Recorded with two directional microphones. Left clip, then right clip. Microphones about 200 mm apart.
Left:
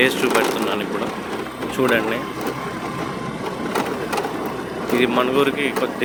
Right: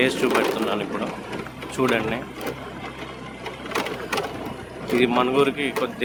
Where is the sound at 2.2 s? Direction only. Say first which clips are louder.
Left 6 dB; 55° left (ahead or behind).